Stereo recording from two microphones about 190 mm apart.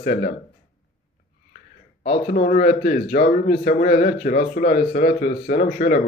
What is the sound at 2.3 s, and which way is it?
Speech, 45° left (ahead or behind).